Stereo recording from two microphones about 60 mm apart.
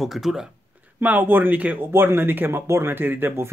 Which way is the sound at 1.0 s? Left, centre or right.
Right.